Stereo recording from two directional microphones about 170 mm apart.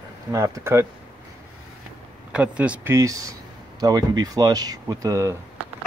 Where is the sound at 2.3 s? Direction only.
5° right (ahead or behind).